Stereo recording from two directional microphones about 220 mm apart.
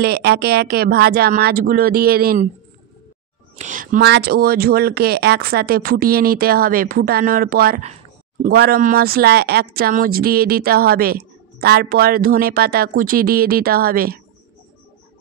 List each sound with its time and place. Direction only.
0.0 s speech: 45° right (ahead or behind)
3.5 s speech: 35° right (ahead or behind)
7.8 s a sound: 30° right (ahead or behind)
8.5 s speech: 45° right (ahead or behind)